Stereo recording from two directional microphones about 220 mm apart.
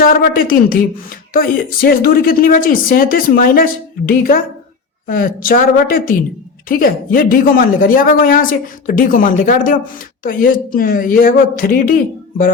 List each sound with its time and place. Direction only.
0.0 s a woman's voice: 40° left (ahead or behind)